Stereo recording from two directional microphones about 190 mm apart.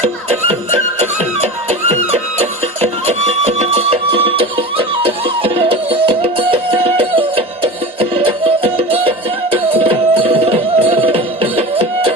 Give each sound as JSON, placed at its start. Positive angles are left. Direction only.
{"t": 0.0, "sound": "music", "side_deg": -35}